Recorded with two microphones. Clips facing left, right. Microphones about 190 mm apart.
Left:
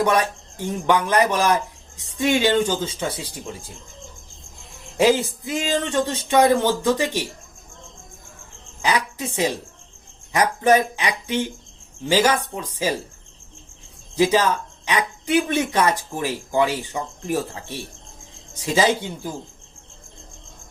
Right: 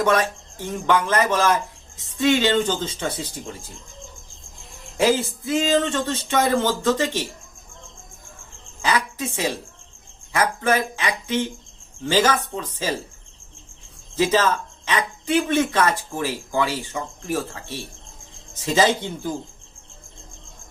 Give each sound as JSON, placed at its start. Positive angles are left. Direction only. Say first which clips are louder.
{"t": 0.0, "sound": "speech", "louder": "even", "side_deg": 15}
{"t": 4.9, "sound": "speech", "louder": "left 2 dB", "side_deg": 15}
{"t": 8.8, "sound": "a woman's voice", "louder": "even", "side_deg": 15}
{"t": 14.2, "sound": "speech", "louder": "left 1 dB", "side_deg": 15}